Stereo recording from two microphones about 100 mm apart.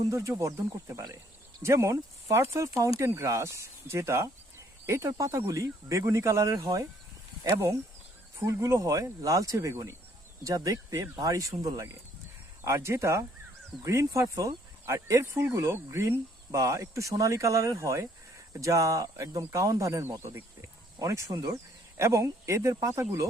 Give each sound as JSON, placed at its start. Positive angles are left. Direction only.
{"t": 0.1, "sound": "speech", "side_deg": -30}
{"t": 8.4, "sound": "speech", "side_deg": -30}